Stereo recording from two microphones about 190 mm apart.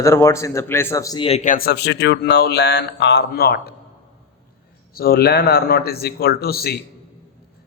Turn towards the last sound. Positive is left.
turn(degrees=55)  # may be behind; listen again after turning